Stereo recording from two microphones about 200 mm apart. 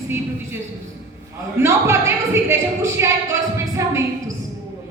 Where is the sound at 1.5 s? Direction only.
15° right (ahead or behind).